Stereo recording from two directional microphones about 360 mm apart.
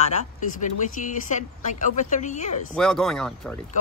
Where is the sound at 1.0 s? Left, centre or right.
Left.